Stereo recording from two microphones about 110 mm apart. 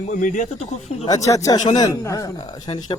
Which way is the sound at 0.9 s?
75° left (ahead or behind).